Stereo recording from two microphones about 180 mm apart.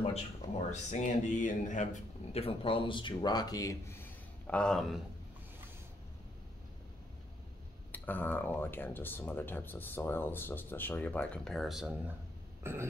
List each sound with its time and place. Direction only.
0.7 s speech: 40° left (ahead or behind); by 5.0 s centre (ahead or behind)
7.9 s speech: 10° left (ahead or behind)
12.6 s burping: 15° right (ahead or behind)